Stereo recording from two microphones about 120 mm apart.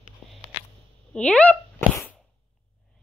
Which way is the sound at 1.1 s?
10° left (ahead or behind).